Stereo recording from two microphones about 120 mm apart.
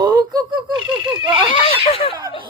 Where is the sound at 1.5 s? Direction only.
55° left (ahead or behind).